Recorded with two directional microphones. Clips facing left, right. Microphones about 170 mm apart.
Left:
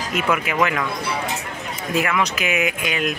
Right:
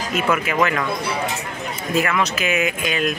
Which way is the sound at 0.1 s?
15° left (ahead or behind).